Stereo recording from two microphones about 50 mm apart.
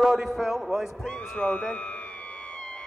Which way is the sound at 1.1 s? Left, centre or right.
Left.